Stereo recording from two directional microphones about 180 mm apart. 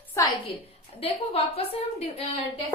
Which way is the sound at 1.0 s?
30° left (ahead or behind).